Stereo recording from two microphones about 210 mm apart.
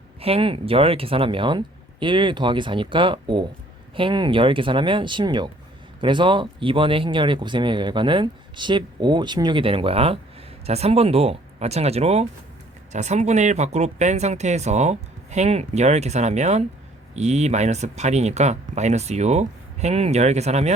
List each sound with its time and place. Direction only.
0.2 s speech: 25° right (ahead or behind)